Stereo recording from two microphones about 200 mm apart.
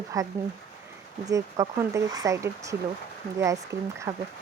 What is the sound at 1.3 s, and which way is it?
Speech, 15° right (ahead or behind).